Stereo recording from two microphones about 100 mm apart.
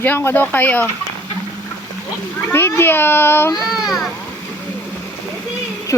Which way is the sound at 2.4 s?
20° left (ahead or behind).